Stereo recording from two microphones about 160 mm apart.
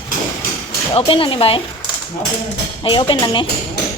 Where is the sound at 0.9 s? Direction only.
35° left (ahead or behind).